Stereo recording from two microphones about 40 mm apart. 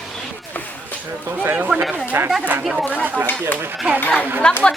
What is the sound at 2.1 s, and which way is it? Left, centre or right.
Chatter, right.